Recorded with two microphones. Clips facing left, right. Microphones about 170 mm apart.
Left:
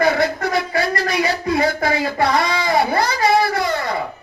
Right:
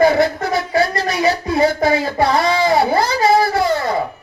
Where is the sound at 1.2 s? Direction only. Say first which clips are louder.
Right 5 dB; 25° right (ahead or behind).